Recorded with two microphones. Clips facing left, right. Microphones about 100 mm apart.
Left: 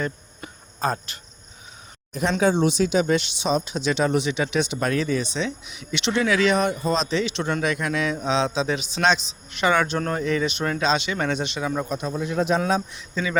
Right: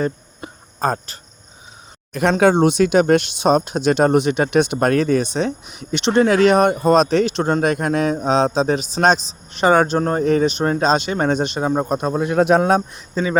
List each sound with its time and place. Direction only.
0.0 s cricket: 35° right (ahead or behind)
2.4 s speech: 60° right (ahead or behind); by 13.4 s 35° right (ahead or behind)